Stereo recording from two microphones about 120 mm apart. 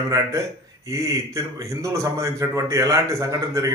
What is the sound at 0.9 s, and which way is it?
A man's voice, 25° right (ahead or behind).